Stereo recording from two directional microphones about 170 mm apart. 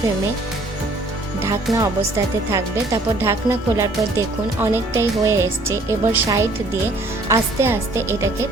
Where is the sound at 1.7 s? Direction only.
Centre (ahead or behind).